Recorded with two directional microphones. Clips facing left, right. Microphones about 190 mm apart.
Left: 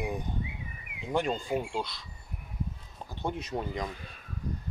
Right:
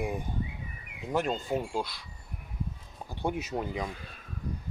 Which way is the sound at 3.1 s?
10° right (ahead or behind).